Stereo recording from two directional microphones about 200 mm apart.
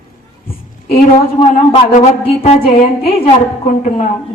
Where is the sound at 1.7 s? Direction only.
35° left (ahead or behind).